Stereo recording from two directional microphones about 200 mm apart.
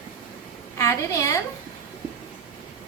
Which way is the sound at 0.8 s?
15° left (ahead or behind).